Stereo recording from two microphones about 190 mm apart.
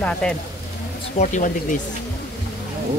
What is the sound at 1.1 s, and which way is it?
Speech, 40° left (ahead or behind).